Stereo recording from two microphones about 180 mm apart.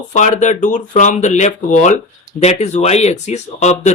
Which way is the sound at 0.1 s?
40° left (ahead or behind).